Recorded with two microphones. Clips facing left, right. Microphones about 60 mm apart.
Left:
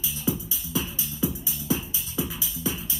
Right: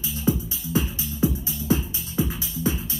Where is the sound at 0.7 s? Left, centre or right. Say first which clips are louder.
Right 5 dB; right.